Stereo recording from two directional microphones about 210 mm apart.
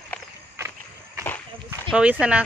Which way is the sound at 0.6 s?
10° right (ahead or behind).